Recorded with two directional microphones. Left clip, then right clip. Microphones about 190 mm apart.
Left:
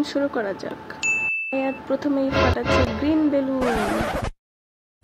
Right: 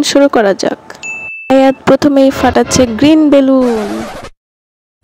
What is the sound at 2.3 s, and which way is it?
Speech, centre (ahead or behind).